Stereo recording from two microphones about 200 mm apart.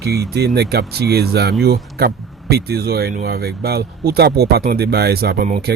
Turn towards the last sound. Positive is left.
turn(degrees=-45)  # may be behind; listen again after turning